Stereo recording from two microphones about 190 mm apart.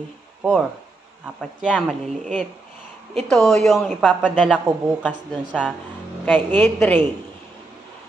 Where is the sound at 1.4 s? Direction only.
5° left (ahead or behind).